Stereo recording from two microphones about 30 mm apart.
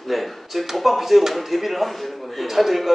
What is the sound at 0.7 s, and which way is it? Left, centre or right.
Speech, centre.